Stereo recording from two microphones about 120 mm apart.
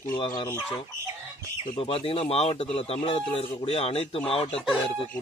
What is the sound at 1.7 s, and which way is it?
Speech, 50° left (ahead or behind).